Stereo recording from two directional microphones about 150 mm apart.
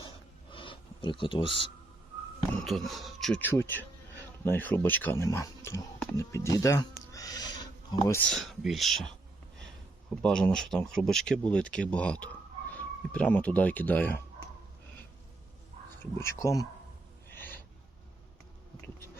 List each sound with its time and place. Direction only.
0.5 s a sound: 35° left (ahead or behind)
2.6 s speech: centre (ahead or behind)
3.4 s speech: 15° left (ahead or behind)
8.2 s speech: centre (ahead or behind)
10.2 s speech: 5° left (ahead or behind)
16.1 s speech: 20° left (ahead or behind)
17.3 s gasp: 15° left (ahead or behind)